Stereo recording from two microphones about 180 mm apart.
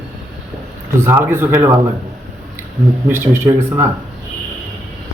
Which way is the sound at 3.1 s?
15° right (ahead or behind).